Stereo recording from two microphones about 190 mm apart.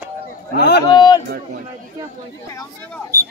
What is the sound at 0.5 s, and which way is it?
Speech, 60° left (ahead or behind).